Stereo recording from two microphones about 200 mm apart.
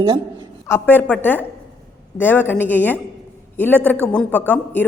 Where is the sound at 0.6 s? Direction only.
10° left (ahead or behind).